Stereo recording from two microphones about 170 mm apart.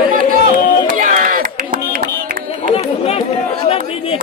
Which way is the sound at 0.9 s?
55° right (ahead or behind).